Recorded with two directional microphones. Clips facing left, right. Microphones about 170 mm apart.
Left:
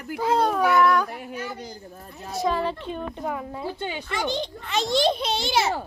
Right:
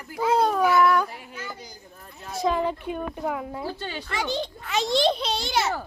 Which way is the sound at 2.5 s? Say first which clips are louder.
Right 1 dB; 15° right (ahead or behind).